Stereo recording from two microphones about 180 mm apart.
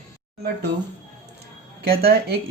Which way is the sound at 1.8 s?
60° right (ahead or behind).